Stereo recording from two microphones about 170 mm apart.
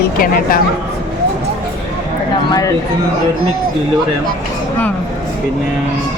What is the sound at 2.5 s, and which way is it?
Speech, 20° left (ahead or behind).